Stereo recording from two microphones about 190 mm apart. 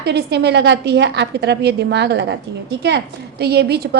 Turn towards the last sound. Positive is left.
turn(degrees=-60)  # may be behind; listen again after turning